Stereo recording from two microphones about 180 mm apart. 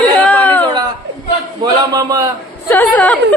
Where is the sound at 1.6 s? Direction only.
20° right (ahead or behind).